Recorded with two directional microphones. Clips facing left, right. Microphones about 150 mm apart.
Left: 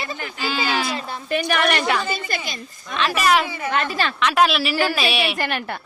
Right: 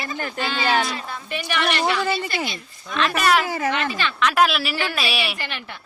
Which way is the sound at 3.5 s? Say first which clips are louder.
Right 4 dB; 90° right.